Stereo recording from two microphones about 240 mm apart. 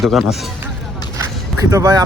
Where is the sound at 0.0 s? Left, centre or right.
Centre.